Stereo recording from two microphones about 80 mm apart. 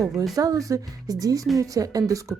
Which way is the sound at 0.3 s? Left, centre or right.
Right.